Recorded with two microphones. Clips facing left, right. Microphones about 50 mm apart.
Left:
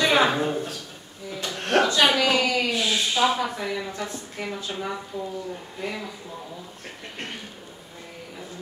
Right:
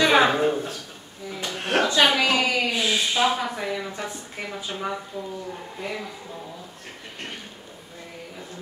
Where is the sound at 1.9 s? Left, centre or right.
Right.